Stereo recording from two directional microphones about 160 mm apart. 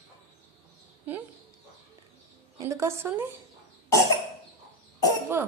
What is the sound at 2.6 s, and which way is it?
Speech, 15° right (ahead or behind).